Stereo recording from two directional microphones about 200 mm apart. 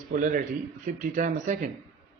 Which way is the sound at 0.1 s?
40° right (ahead or behind).